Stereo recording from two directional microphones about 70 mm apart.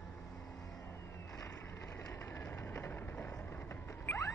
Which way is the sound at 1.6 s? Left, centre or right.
Left.